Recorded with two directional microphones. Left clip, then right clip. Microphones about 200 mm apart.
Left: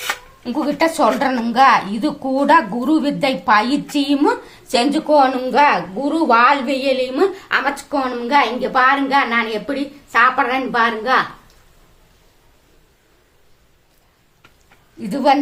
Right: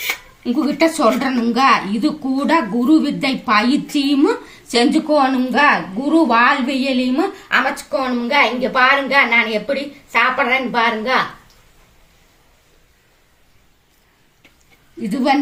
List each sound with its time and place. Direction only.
0.4 s a woman's voice: 55° left (ahead or behind)
8.2 s a woman's voice: 20° left (ahead or behind)
15.0 s a woman's voice: 55° left (ahead or behind)